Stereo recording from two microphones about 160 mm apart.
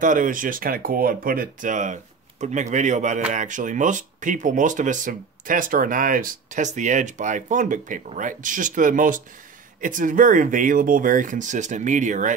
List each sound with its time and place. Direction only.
0.0 s speech: 55° right (ahead or behind)